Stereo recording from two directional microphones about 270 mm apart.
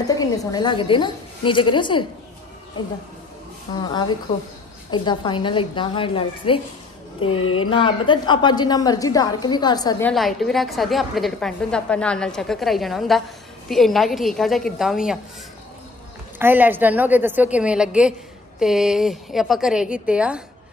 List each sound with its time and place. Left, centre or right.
0.0 s a woman's voice: centre
3.7 s a woman's voice: centre
7.3 s speech: left
7.7 s a woman's voice: centre
16.3 s a woman's voice: centre